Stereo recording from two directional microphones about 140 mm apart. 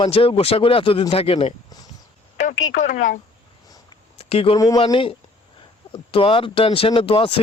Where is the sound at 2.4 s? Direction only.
65° left (ahead or behind).